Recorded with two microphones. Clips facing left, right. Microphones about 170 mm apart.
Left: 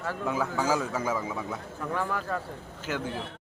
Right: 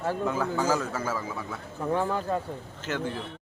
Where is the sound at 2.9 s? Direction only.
10° left (ahead or behind).